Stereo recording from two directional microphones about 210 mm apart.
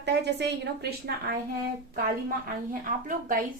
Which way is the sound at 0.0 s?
55° right (ahead or behind).